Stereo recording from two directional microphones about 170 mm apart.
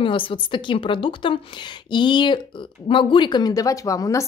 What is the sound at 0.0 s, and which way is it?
A woman's voice, 30° left (ahead or behind).